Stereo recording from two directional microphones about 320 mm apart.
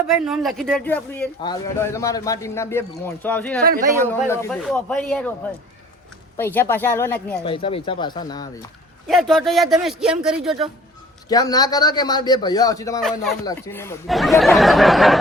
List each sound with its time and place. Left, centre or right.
0.1 s speech: centre
3.6 s speech: right
4.0 s speech: centre
6.3 s speech: centre
7.4 s speech: centre
9.0 s speech: centre
11.3 s speech: centre